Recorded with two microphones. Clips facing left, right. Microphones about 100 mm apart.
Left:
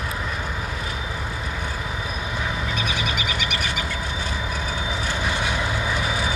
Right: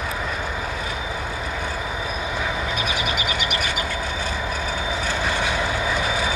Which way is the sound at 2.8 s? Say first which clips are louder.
Right 1 dB; 10° right (ahead or behind).